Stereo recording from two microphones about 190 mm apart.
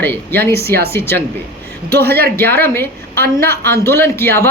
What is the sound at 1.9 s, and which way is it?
Speech, 55° right (ahead or behind).